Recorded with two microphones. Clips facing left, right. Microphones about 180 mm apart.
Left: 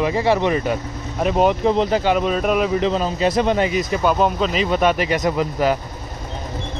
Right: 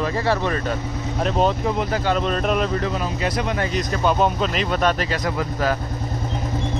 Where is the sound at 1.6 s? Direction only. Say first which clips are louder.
Left 5 dB; 25° left (ahead or behind); by 2.8 s 5° left (ahead or behind).